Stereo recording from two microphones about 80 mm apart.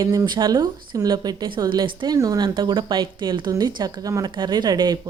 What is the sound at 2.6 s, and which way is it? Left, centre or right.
Speech, right.